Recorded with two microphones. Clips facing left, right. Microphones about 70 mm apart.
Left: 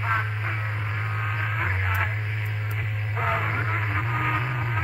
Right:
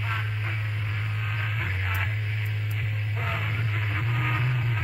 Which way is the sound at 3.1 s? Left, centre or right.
Left.